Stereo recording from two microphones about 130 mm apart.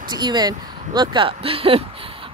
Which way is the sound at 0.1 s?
35° right (ahead or behind).